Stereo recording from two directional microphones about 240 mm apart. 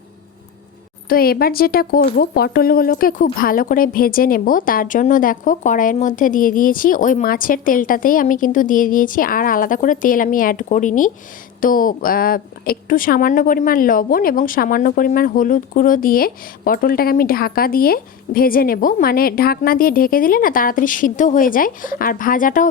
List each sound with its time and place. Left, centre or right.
1.0 s a woman's voice: left